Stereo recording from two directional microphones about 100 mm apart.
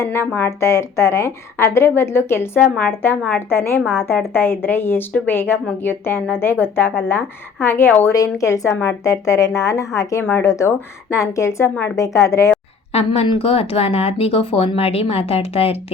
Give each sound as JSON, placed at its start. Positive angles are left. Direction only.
{"t": 0.0, "sound": "a woman's voice", "side_deg": 25}
{"t": 2.6, "sound": "a woman's voice", "side_deg": 15}
{"t": 8.1, "sound": "a woman's voice", "side_deg": 35}
{"t": 11.7, "sound": "a woman's voice", "side_deg": 15}
{"t": 11.9, "sound": "speech", "side_deg": 30}
{"t": 12.9, "sound": "a woman's voice", "side_deg": 90}
{"t": 13.2, "sound": "speech", "side_deg": 65}